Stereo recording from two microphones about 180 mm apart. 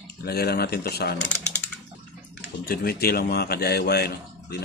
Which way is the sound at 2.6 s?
55° left (ahead or behind).